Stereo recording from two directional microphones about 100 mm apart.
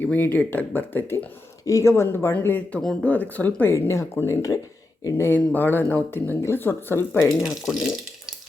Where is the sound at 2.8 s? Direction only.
5° left (ahead or behind).